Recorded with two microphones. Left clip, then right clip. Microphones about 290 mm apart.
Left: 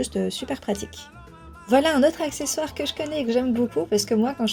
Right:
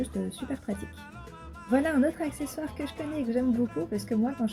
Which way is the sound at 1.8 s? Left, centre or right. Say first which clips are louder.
Left 7 dB; centre.